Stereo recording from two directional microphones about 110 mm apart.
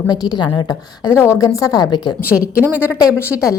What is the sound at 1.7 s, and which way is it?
Speech, 40° left (ahead or behind).